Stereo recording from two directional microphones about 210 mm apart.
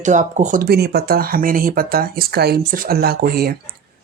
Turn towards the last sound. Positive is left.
turn(degrees=-45)  # may be behind; listen again after turning